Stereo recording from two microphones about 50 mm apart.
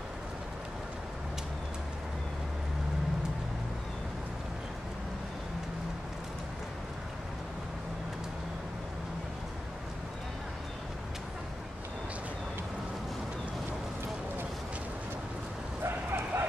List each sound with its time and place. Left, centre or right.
15.8 s bow-wow: right